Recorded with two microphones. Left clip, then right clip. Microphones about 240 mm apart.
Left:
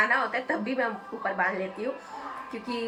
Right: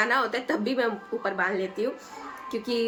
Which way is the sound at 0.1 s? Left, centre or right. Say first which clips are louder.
Right 1 dB; centre.